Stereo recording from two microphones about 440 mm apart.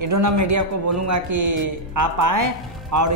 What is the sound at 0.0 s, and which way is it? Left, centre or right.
A man's voice, right.